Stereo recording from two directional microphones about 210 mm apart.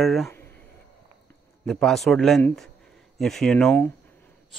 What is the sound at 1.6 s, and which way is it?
Speech, centre (ahead or behind).